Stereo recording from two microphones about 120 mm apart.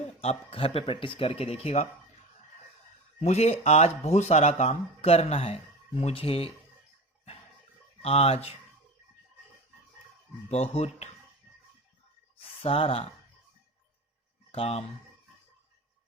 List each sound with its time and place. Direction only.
0.2 s speech: 55° left (ahead or behind)
3.2 s speech: 65° left (ahead or behind)
8.0 s speech: 60° left (ahead or behind)
10.5 s speech: 65° left (ahead or behind)
12.4 s speech: 50° left (ahead or behind)
14.5 s speech: 55° left (ahead or behind)